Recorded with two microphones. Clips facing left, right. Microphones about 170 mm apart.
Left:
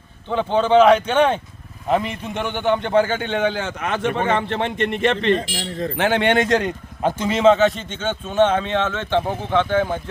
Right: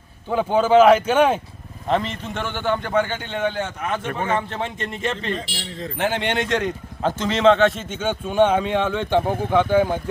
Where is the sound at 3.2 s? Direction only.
80° left.